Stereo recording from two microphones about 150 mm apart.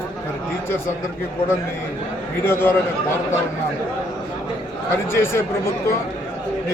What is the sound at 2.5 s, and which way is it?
Speech, 15° left (ahead or behind).